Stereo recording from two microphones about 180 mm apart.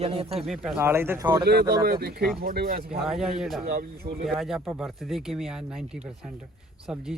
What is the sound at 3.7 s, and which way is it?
Speech, 55° right (ahead or behind).